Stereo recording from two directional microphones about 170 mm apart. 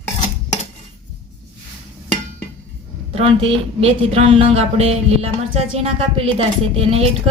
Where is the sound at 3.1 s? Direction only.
30° right (ahead or behind).